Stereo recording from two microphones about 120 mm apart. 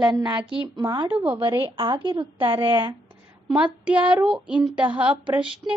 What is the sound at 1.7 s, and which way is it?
A woman's voice, 40° right (ahead or behind).